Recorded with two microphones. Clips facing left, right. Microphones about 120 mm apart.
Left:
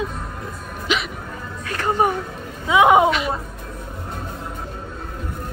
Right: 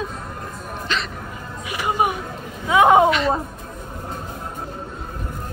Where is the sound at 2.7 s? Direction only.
15° left (ahead or behind).